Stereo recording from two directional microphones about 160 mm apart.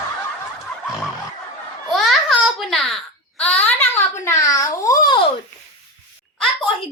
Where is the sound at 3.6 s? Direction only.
10° left (ahead or behind).